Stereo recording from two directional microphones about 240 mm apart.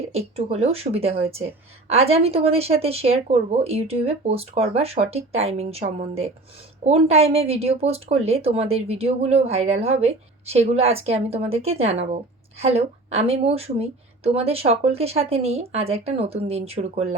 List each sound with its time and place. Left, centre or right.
0.1 s a woman's voice: right